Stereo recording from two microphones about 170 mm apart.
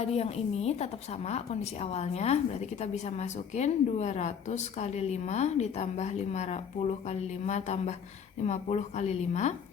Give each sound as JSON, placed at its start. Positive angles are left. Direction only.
{"t": 0.0, "sound": "a woman's voice", "side_deg": 35}